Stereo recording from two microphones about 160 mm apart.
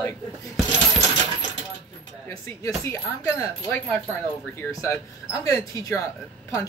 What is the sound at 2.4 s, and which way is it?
Speech, 20° left (ahead or behind).